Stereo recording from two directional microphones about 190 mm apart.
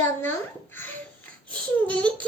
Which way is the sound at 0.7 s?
10° left (ahead or behind).